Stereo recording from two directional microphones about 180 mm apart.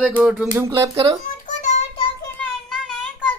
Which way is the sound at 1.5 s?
40° left (ahead or behind).